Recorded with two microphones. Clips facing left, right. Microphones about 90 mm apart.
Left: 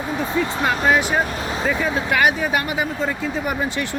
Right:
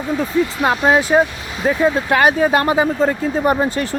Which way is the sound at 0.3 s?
30° left (ahead or behind).